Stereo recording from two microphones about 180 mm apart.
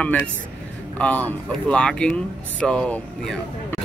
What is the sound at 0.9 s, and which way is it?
Speech, 10° left (ahead or behind).